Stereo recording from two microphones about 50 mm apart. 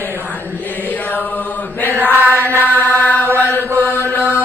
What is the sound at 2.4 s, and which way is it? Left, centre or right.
Mantra, left.